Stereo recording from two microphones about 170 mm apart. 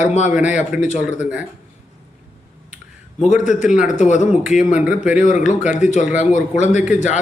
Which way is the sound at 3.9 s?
45° left (ahead or behind).